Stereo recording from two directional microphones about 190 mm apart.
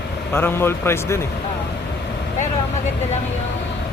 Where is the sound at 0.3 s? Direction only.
10° left (ahead or behind).